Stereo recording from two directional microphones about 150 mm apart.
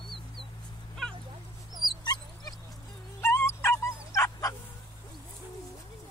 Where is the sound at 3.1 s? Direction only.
15° left (ahead or behind).